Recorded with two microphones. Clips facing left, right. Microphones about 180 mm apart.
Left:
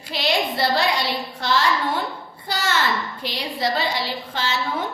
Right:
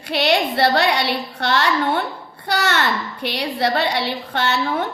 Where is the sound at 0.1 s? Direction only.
65° right (ahead or behind).